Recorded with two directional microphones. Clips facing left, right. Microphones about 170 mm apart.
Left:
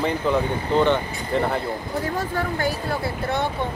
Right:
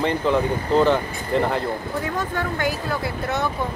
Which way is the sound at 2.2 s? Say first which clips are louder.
Even; 30° left (ahead or behind).